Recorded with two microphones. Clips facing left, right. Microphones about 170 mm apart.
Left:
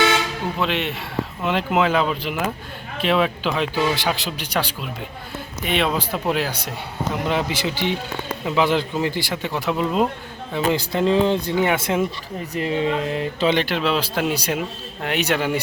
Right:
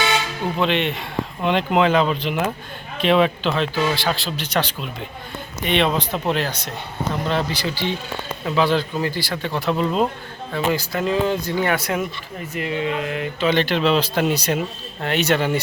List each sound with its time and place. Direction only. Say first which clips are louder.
0.6 s speech: right 4 dB; 5° left (ahead or behind)
3.5 s speech: even; 15° left (ahead or behind)
10.7 s speech: left 3 dB; 25° left (ahead or behind)
13.5 s speech: right 4 dB; 10° left (ahead or behind)